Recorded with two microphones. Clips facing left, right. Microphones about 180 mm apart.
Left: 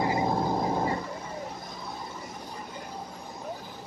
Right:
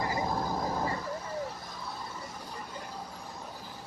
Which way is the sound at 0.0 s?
25° left (ahead or behind).